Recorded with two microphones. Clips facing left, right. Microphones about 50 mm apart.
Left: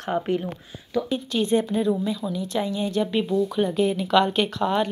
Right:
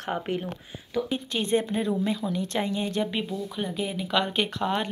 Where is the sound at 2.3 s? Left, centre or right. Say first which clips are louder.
Left 1 dB; right.